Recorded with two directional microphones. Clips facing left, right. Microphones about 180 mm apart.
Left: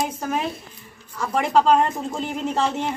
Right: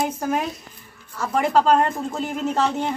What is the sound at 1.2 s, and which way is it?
Speech, 5° right (ahead or behind).